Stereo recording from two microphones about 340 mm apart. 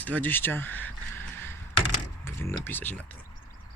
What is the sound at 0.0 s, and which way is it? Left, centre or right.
Speech, centre.